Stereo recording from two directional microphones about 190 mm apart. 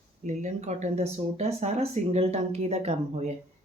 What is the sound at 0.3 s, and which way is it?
Speech, 35° right (ahead or behind).